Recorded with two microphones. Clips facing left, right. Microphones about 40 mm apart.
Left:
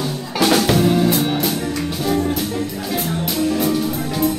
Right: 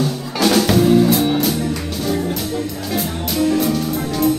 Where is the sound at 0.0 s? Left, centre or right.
Centre.